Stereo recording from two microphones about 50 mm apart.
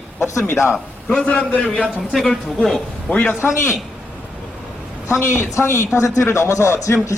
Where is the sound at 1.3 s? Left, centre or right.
Centre.